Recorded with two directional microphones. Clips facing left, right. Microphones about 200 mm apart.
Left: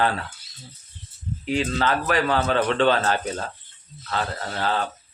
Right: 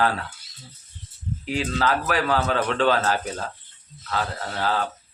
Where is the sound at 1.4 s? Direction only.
5° right (ahead or behind).